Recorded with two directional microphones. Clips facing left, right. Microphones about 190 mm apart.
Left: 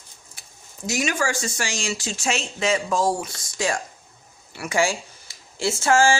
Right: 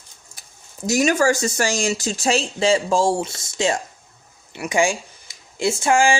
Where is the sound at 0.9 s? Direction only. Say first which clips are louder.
Right 7 dB; 40° right (ahead or behind).